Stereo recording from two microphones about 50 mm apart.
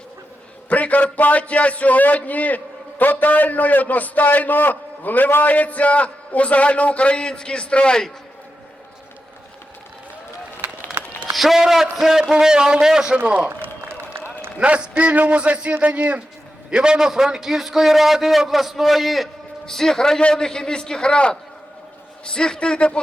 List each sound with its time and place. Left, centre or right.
0.7 s a man's voice: left
11.3 s a man's voice: centre
13.2 s a man's voice: right
13.6 s a sound: right
14.6 s a man's voice: right; by 23.0 s centre